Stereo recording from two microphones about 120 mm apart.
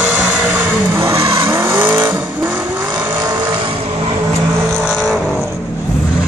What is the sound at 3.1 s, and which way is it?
Vehicle, 35° right (ahead or behind).